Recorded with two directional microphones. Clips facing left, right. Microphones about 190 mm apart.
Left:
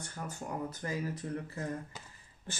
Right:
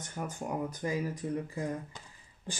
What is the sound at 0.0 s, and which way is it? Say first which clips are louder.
Speech: right 4 dB; 15° right (ahead or behind).